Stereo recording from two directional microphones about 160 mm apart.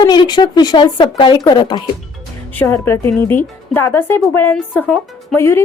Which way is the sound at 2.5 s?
15° left (ahead or behind).